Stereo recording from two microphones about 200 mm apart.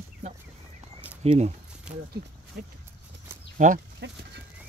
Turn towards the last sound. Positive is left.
turn(degrees=-60)  # may be behind; listen again after turning